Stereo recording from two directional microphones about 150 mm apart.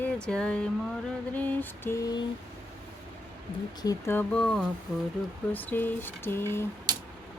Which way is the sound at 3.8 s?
20° left (ahead or behind).